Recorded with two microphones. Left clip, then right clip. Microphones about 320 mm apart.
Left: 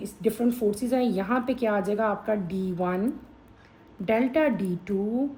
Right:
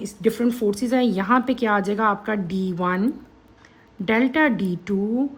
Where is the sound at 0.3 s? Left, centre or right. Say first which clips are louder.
Right 4 dB; right.